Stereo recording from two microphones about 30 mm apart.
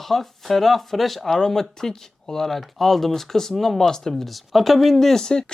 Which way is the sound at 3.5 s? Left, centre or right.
Centre.